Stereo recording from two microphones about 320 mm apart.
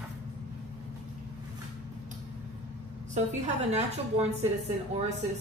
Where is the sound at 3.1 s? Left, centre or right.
Right.